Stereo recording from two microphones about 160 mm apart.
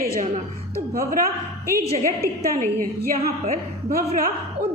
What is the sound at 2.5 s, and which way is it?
Speech, 65° right (ahead or behind).